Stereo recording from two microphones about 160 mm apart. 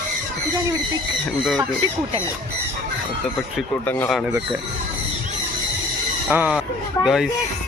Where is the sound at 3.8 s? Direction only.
15° left (ahead or behind).